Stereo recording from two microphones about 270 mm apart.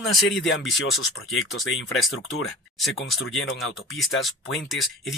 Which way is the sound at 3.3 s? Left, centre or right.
Left.